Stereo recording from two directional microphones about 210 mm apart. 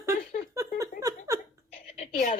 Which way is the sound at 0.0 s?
15° right (ahead or behind).